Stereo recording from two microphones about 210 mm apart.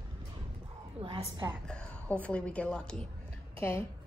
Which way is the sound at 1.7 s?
5° left (ahead or behind).